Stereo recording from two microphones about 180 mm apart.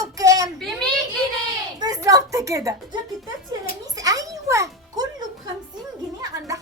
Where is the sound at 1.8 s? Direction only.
20° right (ahead or behind).